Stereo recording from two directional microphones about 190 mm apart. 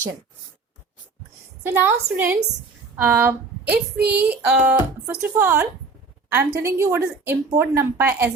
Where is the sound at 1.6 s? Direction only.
10° right (ahead or behind).